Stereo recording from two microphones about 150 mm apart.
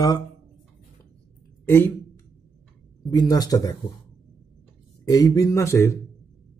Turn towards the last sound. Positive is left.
turn(degrees=20)  # may be behind; listen again after turning